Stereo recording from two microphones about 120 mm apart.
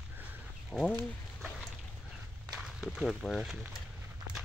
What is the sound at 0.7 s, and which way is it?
Speech, 5° left (ahead or behind).